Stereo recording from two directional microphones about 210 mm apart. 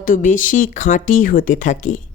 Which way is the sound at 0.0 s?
40° left (ahead or behind).